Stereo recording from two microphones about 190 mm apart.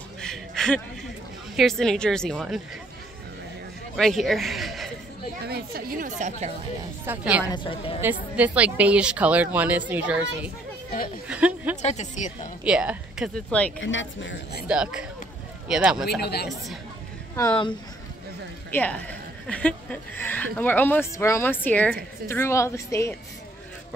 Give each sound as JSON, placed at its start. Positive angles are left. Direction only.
{"t": 0.2, "sound": "a sound", "side_deg": 5}
{"t": 1.6, "sound": "a woman's voice", "side_deg": 0}
{"t": 3.9, "sound": "a man's voice", "side_deg": 0}
{"t": 5.4, "sound": "a woman's voice", "side_deg": -55}
{"t": 7.1, "sound": "a woman's voice", "side_deg": -5}
{"t": 7.4, "sound": "a woman's voice", "side_deg": 25}
{"t": 8.0, "sound": "a woman's voice", "side_deg": -10}
{"t": 11.8, "sound": "speech", "side_deg": 35}
{"t": 12.6, "sound": "a woman's voice", "side_deg": -5}
{"t": 13.7, "sound": "speech", "side_deg": 85}
{"t": 14.7, "sound": "a woman's voice", "side_deg": -5}
{"t": 16.2, "sound": "a woman's voice", "side_deg": 60}
{"t": 18.7, "sound": "a woman's voice", "side_deg": 10}